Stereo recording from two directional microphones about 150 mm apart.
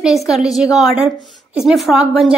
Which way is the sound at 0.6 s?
5° right (ahead or behind).